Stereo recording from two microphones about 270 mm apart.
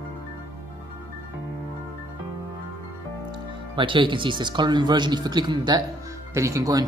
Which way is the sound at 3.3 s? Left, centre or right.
Centre.